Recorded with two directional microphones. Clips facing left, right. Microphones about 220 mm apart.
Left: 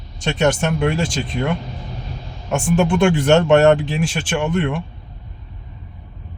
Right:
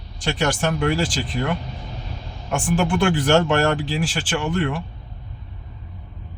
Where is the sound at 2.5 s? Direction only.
25° left (ahead or behind).